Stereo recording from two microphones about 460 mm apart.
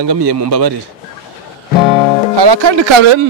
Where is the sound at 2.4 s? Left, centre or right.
Right.